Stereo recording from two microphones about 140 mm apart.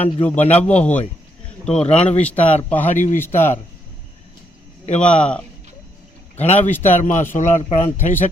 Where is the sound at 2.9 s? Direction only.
65° left (ahead or behind).